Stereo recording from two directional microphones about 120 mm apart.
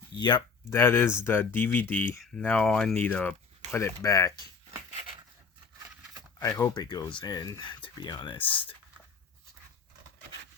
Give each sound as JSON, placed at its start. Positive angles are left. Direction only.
{"t": 0.2, "sound": "speech", "side_deg": 35}
{"t": 0.7, "sound": "speech", "side_deg": 20}
{"t": 3.7, "sound": "speech", "side_deg": 25}
{"t": 6.4, "sound": "speech", "side_deg": 30}